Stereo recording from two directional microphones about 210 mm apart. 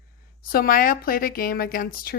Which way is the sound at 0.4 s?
45° left (ahead or behind).